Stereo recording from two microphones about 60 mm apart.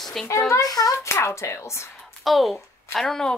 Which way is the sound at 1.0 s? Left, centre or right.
Left.